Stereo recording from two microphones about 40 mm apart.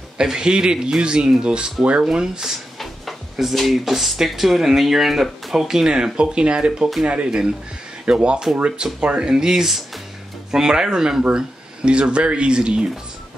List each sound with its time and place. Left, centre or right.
0.2 s speech: centre
2.0 s speech: centre
3.5 s speech: centre; by 13.0 s right